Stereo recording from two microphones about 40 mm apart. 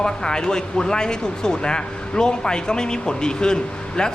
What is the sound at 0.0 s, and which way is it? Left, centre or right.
Speech, left.